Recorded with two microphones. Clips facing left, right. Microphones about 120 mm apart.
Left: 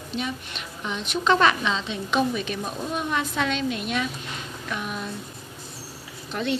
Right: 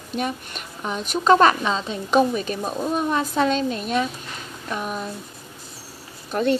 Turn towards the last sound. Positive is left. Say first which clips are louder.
# right 6 dB
turn(degrees=-45)  # may be behind; listen again after turning